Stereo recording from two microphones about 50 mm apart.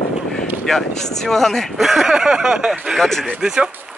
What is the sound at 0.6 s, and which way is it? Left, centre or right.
Speech, centre.